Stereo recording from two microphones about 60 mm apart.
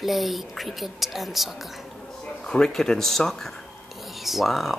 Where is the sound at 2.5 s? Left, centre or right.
Centre.